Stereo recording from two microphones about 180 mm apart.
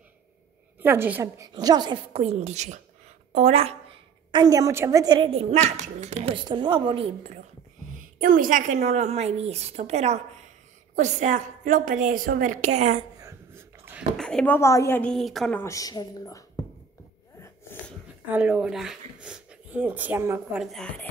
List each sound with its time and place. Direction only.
0.8 s a child's voice: 10° right (ahead or behind); by 3.7 s 35° right (ahead or behind)
4.3 s a child's voice: 20° right (ahead or behind)
8.2 s a woman's voice: 50° right (ahead or behind)
13.2 s a sound: 15° right (ahead or behind)
14.1 s speech: 5° left (ahead or behind)
15.6 s speech: 20° left (ahead or behind)
17.4 s a sound: 10° left (ahead or behind)
18.3 s speech: 5° right (ahead or behind)
20.6 s speech: 5° left (ahead or behind)